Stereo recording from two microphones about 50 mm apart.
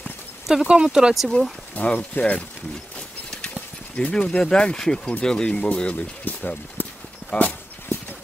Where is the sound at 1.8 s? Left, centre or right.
Left.